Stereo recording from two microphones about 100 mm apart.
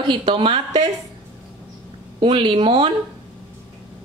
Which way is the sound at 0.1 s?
60° right (ahead or behind).